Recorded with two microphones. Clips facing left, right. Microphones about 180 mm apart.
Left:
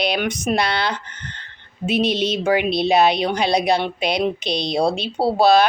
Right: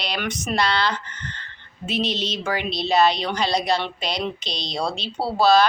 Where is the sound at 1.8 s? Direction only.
55° left (ahead or behind).